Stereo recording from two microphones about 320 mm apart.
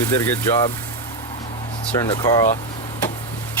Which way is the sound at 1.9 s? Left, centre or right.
Centre.